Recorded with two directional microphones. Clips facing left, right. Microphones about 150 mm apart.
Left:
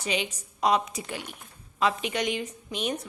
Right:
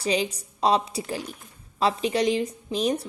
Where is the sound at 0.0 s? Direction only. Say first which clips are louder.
Right 5 dB; 35° right (ahead or behind).